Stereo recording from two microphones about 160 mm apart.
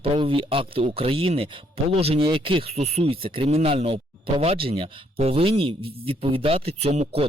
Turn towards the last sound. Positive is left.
turn(degrees=-40)  # may be behind; listen again after turning